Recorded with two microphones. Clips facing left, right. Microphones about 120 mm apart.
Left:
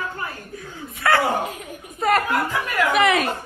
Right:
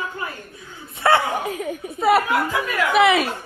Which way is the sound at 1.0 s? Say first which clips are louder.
Right 2 dB; 25° right (ahead or behind).